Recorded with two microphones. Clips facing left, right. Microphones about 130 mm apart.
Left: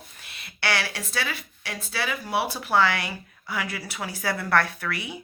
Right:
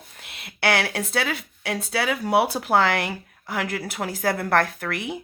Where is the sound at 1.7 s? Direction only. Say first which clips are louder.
Right 6 dB; 75° right (ahead or behind).